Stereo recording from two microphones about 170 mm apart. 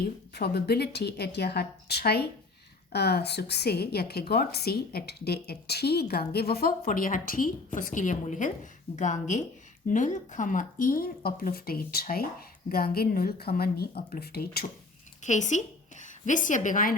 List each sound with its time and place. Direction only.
0.3 s a woman's voice: 70° left (ahead or behind)
15.2 s a woman's voice: 45° left (ahead or behind)